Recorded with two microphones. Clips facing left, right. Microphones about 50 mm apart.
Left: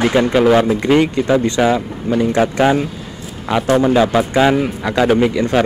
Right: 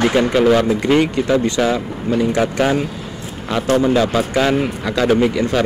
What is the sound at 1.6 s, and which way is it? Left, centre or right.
A man's voice, centre.